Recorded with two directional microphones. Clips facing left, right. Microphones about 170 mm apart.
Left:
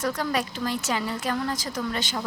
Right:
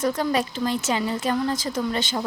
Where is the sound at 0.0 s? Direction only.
25° right (ahead or behind).